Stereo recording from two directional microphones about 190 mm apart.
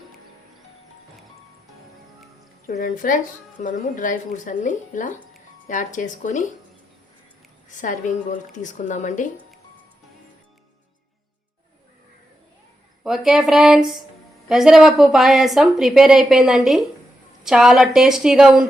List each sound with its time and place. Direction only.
2.6 s speech: 45° left (ahead or behind)
7.7 s a woman's voice: 40° left (ahead or behind)
13.1 s a woman's voice: centre (ahead or behind)